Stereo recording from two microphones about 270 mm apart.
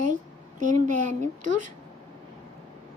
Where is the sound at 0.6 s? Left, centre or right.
Right.